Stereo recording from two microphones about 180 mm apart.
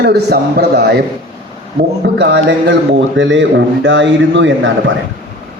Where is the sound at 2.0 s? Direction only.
70° right (ahead or behind).